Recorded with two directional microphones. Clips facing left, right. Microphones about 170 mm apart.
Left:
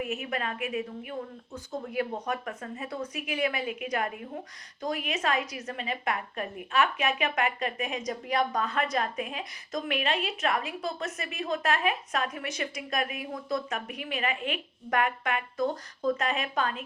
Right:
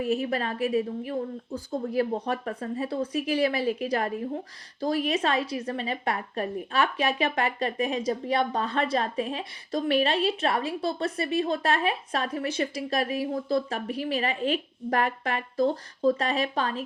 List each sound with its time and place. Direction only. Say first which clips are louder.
0.0 s a woman's voice: right 6 dB; 35° right (ahead or behind)